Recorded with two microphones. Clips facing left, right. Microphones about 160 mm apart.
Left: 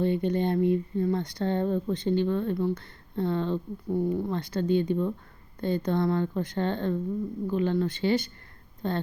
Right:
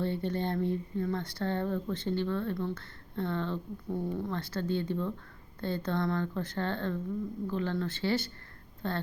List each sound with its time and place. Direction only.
0.0 s speech: 15° left (ahead or behind)